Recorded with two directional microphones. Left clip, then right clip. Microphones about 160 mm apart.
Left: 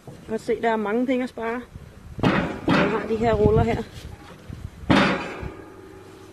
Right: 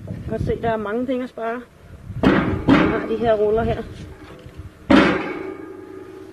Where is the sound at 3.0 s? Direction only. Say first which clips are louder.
Right 3 dB; centre (ahead or behind).